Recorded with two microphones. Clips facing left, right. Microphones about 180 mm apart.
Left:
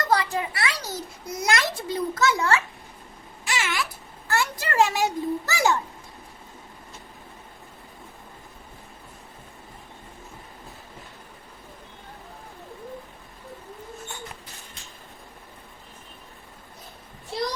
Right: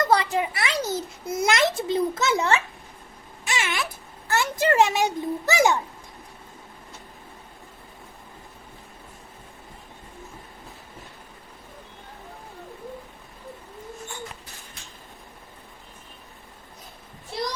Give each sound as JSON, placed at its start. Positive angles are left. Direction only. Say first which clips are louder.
{"t": 0.1, "sound": "a child's voice", "louder": "right 2 dB", "side_deg": -25}
{"t": 3.4, "sound": "a sound", "louder": "even", "side_deg": -20}
{"t": 4.3, "sound": "a child's voice", "louder": "right 5 dB", "side_deg": -20}